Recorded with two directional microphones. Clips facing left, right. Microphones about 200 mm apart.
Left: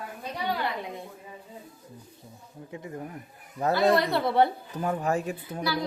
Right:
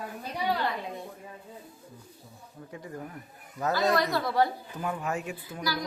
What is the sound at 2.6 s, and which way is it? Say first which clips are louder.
A woman's voice: left 3 dB; 20° left (ahead or behind).